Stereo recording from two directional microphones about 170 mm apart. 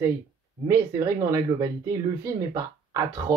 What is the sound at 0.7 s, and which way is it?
Speech, 20° right (ahead or behind).